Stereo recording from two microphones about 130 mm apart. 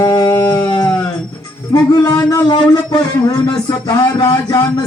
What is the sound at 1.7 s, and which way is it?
Music, 30° left (ahead or behind).